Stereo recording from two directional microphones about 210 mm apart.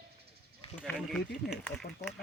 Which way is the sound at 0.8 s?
5° left (ahead or behind).